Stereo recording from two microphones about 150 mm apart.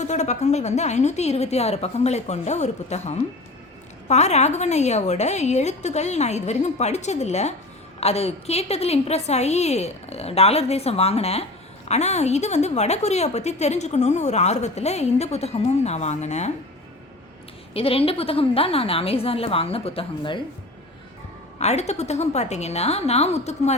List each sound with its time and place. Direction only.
0.0 s a woman's voice: 50° left (ahead or behind)
17.7 s a woman's voice: 40° left (ahead or behind)
21.6 s a woman's voice: 45° left (ahead or behind)